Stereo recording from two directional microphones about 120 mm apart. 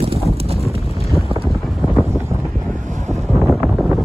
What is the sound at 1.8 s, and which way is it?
Wind noise, centre (ahead or behind).